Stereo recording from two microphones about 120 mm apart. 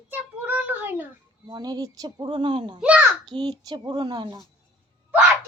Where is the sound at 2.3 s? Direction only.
45° right (ahead or behind).